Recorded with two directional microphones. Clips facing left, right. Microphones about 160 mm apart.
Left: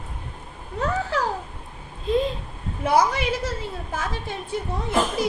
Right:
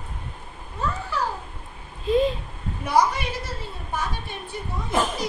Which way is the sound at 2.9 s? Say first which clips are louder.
Even; 90° left.